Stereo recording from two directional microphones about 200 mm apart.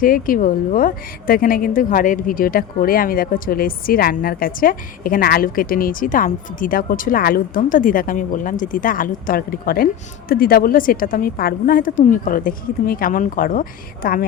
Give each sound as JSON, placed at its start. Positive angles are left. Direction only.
{"t": 0.0, "sound": "a woman's voice", "side_deg": 45}